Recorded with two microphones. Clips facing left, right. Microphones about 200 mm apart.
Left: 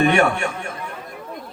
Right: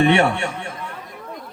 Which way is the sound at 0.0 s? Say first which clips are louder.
Right 1 dB; 30° right (ahead or behind).